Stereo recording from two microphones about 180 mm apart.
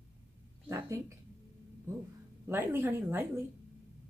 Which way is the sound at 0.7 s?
15° right (ahead or behind).